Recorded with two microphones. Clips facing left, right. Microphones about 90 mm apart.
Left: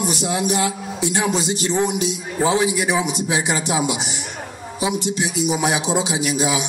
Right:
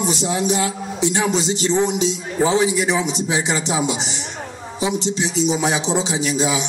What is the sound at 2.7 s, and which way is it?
A man's voice, 15° left (ahead or behind).